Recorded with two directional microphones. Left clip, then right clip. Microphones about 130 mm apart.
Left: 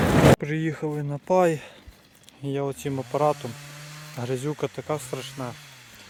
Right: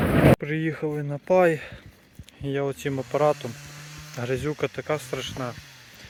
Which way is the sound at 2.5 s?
15° left (ahead or behind).